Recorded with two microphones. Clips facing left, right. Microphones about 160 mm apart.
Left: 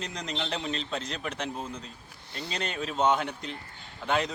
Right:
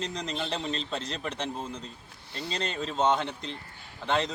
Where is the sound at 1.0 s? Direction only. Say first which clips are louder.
Right 1 dB; 30° right (ahead or behind).